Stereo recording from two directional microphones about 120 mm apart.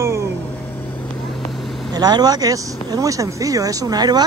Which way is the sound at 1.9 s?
35° right (ahead or behind).